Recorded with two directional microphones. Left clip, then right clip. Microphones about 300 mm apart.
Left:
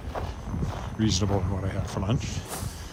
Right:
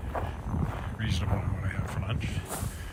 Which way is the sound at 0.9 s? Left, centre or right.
Centre.